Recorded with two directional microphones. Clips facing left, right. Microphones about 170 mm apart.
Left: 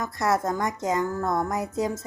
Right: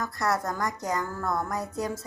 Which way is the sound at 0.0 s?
20° left (ahead or behind).